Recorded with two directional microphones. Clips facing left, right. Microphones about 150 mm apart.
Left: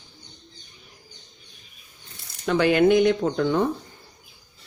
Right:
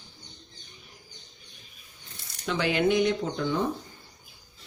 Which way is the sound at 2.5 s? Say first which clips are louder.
Left 7 dB; 50° left (ahead or behind).